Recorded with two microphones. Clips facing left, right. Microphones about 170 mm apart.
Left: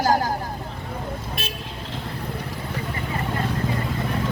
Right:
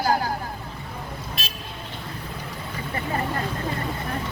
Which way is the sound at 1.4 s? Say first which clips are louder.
Left 4 dB; 55° left (ahead or behind).